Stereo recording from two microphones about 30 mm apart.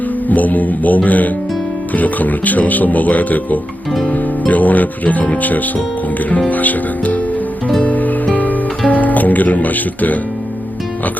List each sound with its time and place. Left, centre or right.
0.3 s speech: left
4.1 s music: left
5.4 s speech: left
7.8 s music: left
8.9 s speech: left